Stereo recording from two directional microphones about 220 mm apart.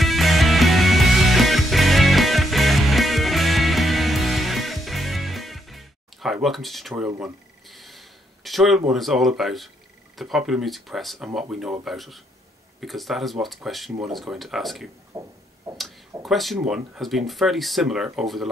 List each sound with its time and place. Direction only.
0.0 s music: centre (ahead or behind)
7.1 s speech: 10° right (ahead or behind)
7.6 s a sound: centre (ahead or behind)
10.1 s speech: centre (ahead or behind)
15.1 s speech: 15° right (ahead or behind)
16.2 s speech: centre (ahead or behind)